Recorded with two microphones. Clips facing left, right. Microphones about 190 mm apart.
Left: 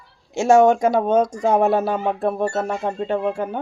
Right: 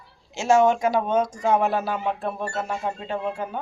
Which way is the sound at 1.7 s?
25° left (ahead or behind).